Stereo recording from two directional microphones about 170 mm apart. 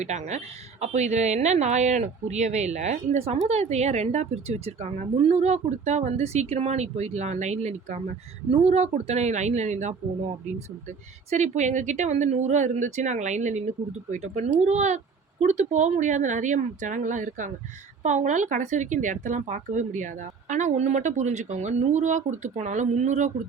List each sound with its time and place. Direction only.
0.0 s speech: 40° right (ahead or behind)
11.3 s speech: 45° right (ahead or behind)